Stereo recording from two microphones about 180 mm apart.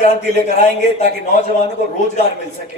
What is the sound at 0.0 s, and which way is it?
A man's voice, 40° left (ahead or behind).